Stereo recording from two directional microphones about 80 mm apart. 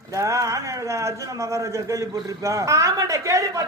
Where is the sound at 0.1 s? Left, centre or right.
Right.